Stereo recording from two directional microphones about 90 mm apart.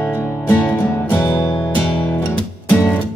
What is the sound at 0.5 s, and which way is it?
Music, 20° left (ahead or behind).